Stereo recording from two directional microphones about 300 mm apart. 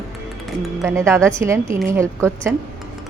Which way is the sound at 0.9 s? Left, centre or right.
Centre.